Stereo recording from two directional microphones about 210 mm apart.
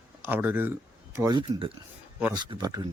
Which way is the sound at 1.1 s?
20° right (ahead or behind).